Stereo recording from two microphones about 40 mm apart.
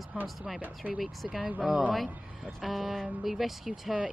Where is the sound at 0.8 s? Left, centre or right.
Right.